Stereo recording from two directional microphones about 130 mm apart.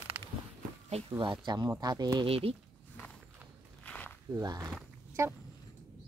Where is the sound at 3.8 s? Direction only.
10° left (ahead or behind).